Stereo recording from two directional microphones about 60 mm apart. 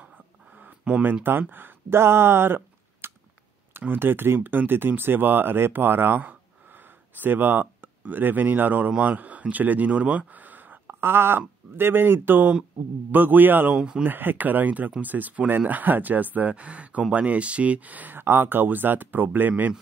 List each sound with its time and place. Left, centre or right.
0.6 s a sound: right
1.5 s speech: right
11.0 s speech: right
13.7 s speech: centre
14.0 s speech: right
18.2 s speech: right